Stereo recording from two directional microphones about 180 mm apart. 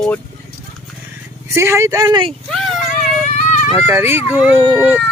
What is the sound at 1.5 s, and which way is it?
Speech, 15° right (ahead or behind).